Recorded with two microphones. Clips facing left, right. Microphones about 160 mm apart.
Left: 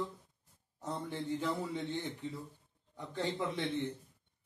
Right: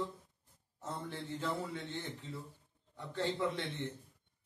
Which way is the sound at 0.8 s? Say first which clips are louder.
Left 3 dB; 15° left (ahead or behind).